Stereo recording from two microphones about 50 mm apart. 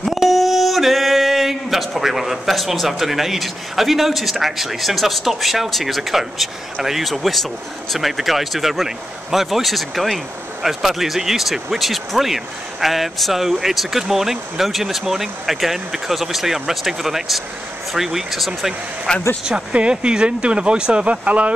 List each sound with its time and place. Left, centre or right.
0.0 s a sound: centre
7.9 s speech: centre
19.1 s speech: centre
19.4 s speech: centre